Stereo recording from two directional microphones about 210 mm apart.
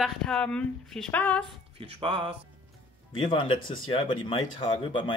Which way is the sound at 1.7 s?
25° right (ahead or behind).